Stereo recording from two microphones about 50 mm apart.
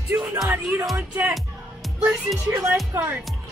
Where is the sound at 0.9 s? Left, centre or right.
Right.